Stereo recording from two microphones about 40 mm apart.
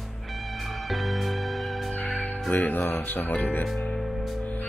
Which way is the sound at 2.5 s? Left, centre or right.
Left.